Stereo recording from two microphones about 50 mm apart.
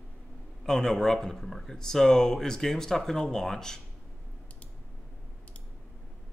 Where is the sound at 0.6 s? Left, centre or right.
Centre.